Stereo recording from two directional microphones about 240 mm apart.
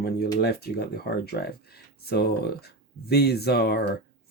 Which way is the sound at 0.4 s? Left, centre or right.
Left.